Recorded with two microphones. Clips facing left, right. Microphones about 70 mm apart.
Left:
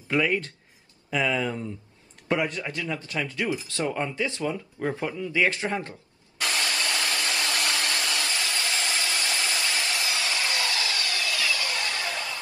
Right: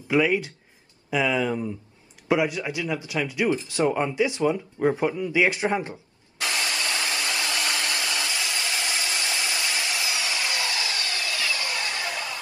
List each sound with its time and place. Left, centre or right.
0.1 s speech: centre
6.4 s hair dryer: right